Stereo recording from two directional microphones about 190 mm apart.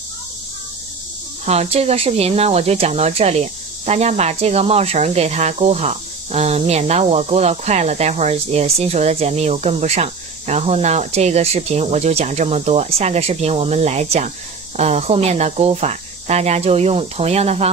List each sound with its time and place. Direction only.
1.4 s speech: 35° right (ahead or behind)